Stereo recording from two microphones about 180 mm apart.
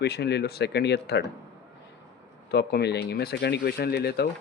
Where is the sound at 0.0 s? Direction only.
65° left (ahead or behind).